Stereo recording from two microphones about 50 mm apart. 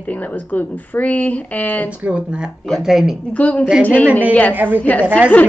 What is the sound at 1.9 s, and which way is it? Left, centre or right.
Speech, right.